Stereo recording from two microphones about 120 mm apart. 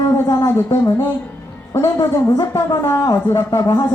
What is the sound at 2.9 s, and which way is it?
Speech, 25° left (ahead or behind).